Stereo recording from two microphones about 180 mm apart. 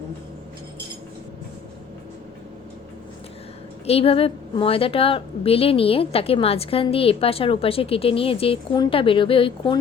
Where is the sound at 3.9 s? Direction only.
35° left (ahead or behind).